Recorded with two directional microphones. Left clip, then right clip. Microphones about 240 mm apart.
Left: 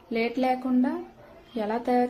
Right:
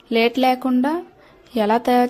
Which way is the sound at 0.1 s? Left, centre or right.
Right.